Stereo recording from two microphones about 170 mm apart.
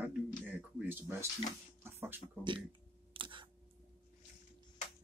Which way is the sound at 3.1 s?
30° right (ahead or behind).